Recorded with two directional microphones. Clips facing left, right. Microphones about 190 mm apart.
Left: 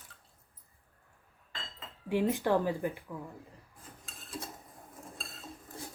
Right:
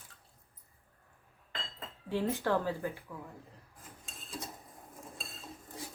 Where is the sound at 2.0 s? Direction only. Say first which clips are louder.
Left 3 dB; 15° left (ahead or behind).